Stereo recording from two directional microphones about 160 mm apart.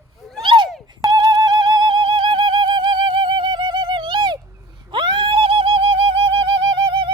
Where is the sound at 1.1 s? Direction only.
30° right (ahead or behind).